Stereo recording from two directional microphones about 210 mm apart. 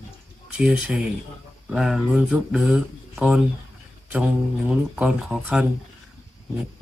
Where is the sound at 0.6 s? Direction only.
5° right (ahead or behind).